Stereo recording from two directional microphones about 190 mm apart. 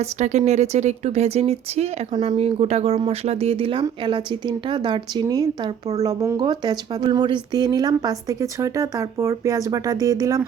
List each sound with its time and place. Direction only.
0.0 s speech: 35° right (ahead or behind); by 10.4 s 20° right (ahead or behind)